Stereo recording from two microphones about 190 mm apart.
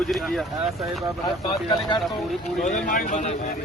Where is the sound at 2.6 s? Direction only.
45° left (ahead or behind).